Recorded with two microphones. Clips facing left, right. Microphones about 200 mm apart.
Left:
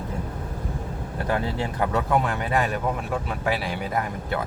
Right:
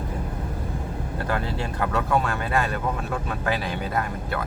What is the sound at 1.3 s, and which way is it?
Speech, 20° left (ahead or behind).